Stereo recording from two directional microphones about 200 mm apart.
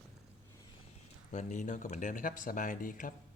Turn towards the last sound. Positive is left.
turn(degrees=45)  # may be behind; listen again after turning